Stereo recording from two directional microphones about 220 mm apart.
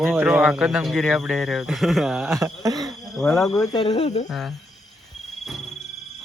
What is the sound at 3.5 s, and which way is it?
Speech, 20° left (ahead or behind).